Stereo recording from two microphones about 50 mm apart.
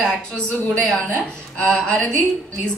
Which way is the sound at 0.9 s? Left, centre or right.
Left.